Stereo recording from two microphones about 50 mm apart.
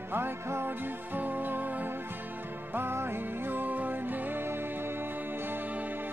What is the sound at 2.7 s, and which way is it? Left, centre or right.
Music, right.